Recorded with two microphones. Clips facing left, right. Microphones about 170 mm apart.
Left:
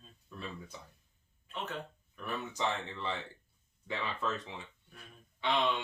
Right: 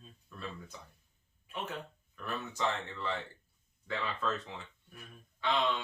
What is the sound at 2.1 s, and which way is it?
Speech, 15° left (ahead or behind).